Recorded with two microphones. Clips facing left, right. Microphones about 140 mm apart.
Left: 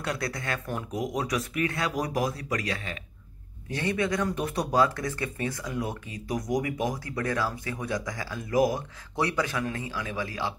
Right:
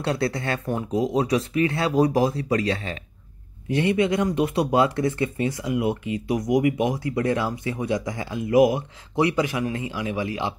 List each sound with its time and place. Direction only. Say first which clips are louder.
0.0 s speech: right 7 dB; 30° right (ahead or behind)
6.3 s speech: right 6 dB; centre (ahead or behind)
6.6 s speech: right 8 dB; 20° right (ahead or behind)